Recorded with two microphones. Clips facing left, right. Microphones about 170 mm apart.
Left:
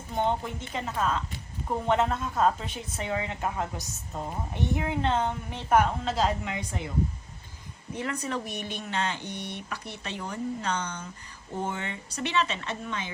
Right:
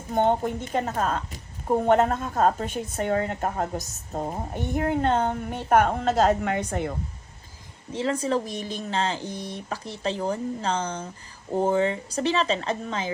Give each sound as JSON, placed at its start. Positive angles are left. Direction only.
{"t": 0.1, "sound": "a woman's voice", "side_deg": -50}
{"t": 7.9, "sound": "speech", "side_deg": -30}
{"t": 9.2, "sound": "speech", "side_deg": -90}
{"t": 9.6, "sound": "speech", "side_deg": -35}